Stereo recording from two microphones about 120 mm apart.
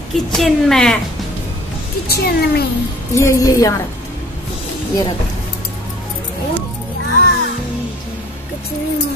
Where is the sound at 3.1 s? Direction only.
25° left (ahead or behind).